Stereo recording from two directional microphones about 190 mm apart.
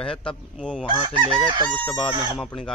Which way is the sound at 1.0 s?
25° right (ahead or behind).